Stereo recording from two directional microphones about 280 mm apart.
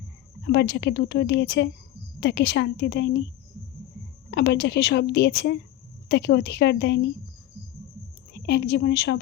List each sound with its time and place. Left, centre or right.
0.4 s a woman's voice: left
4.3 s a woman's voice: left
8.3 s a woman's voice: left